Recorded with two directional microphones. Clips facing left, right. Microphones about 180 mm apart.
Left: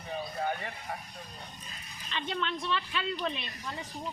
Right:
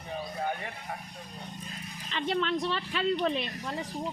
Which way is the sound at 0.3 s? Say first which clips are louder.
Even; centre (ahead or behind).